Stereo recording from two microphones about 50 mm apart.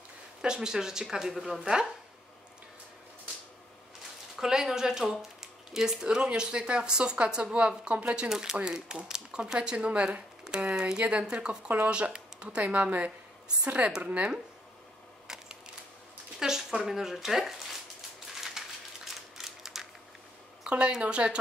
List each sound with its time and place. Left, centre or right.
0.4 s speech: centre
4.4 s speech: centre; by 13.9 s right
15.2 s a sound: centre
16.3 s speech: centre
18.6 s a sound: centre
19.3 s mechanisms: centre
20.6 s speech: centre